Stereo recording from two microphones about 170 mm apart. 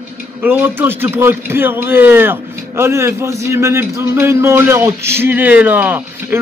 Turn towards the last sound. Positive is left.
turn(degrees=-10)  # may be behind; listen again after turning